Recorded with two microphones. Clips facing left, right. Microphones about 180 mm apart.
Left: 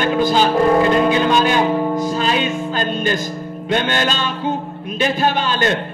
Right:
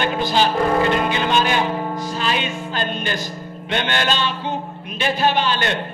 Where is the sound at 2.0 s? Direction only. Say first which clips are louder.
Left 5 dB; 40° left (ahead or behind).